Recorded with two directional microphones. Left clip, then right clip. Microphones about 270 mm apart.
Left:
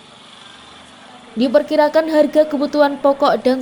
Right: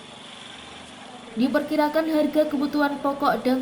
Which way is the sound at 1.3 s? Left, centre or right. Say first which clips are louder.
Left 9 dB; left.